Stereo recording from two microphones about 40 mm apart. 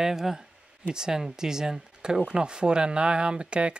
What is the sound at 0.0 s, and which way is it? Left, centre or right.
Speech, centre.